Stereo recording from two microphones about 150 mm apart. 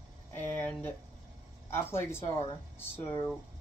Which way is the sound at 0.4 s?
15° left (ahead or behind).